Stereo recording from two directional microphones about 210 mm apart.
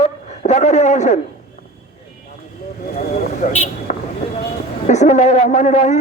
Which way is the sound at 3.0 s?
35° left (ahead or behind).